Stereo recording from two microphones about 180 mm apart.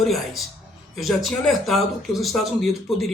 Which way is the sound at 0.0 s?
Centre (ahead or behind).